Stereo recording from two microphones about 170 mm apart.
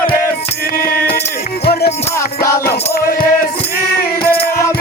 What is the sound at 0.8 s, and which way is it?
Music, 60° left (ahead or behind).